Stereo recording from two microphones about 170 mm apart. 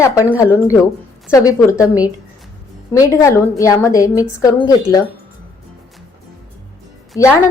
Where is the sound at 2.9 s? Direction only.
20° left (ahead or behind).